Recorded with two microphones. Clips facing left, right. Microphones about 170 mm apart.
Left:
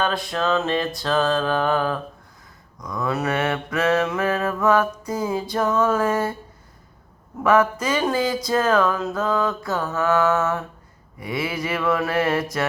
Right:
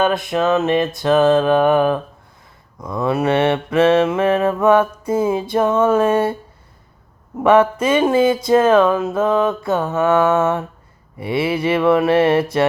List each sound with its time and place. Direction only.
0.0 s mantra: 20° right (ahead or behind)
7.3 s mantra: 25° right (ahead or behind)